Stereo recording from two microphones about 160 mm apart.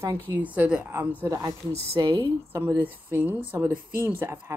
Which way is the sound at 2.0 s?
25° right (ahead or behind).